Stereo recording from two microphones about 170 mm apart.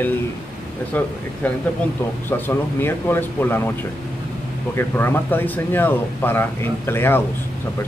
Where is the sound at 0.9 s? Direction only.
10° left (ahead or behind).